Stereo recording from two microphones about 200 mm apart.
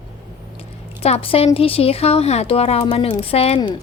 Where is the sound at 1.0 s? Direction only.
30° left (ahead or behind).